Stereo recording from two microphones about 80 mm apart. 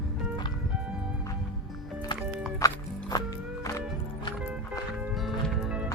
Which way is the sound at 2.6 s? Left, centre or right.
Left.